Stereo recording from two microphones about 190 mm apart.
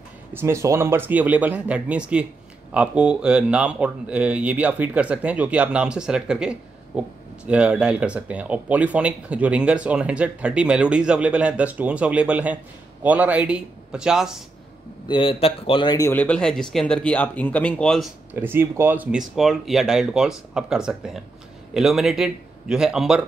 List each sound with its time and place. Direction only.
0.3 s speech: 15° right (ahead or behind)
15.0 s a man's voice: 25° left (ahead or behind)
16.1 s speech: 5° left (ahead or behind)
18.3 s speech: 10° right (ahead or behind)